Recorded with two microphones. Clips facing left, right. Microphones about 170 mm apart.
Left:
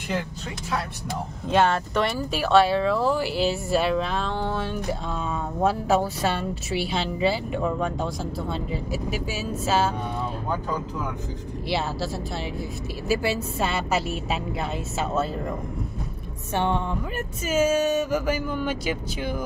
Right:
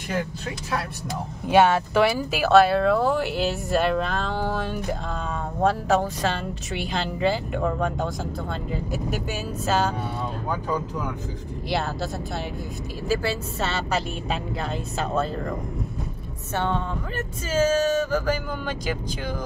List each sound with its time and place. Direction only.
1.5 s speech: 5° right (ahead or behind)
5.6 s speech: 10° left (ahead or behind)
13.1 s speech: 10° left (ahead or behind)
16.5 s speech: 15° left (ahead or behind)